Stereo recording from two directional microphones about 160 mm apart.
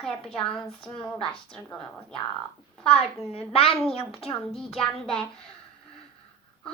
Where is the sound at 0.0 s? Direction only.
5° left (ahead or behind).